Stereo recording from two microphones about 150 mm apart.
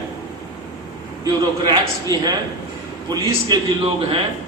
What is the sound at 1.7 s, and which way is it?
A man's voice, 25° right (ahead or behind).